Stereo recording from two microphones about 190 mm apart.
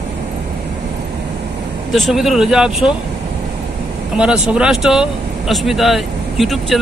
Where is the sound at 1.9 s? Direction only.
Centre (ahead or behind).